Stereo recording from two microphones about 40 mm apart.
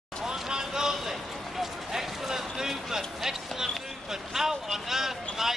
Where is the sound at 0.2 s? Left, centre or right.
Centre.